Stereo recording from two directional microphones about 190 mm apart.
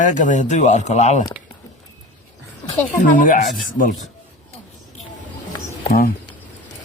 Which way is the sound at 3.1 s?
45° left (ahead or behind).